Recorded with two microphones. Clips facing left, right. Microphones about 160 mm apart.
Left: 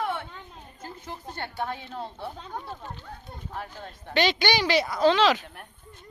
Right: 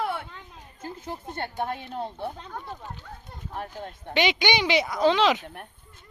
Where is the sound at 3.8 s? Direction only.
20° right (ahead or behind).